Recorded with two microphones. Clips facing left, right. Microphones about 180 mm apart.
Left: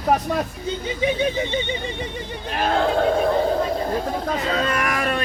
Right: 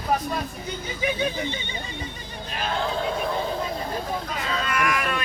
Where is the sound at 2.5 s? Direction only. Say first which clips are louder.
Left 7 dB; 55° left (ahead or behind).